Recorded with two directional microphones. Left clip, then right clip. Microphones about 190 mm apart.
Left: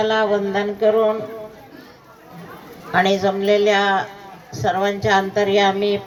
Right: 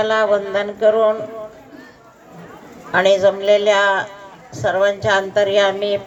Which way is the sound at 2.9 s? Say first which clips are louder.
Right 4 dB; 30° right (ahead or behind).